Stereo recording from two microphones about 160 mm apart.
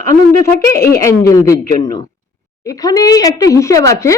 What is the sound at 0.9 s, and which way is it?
Speech, 20° left (ahead or behind).